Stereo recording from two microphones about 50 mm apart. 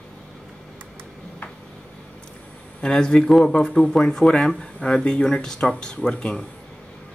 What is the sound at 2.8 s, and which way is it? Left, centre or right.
Speech, centre.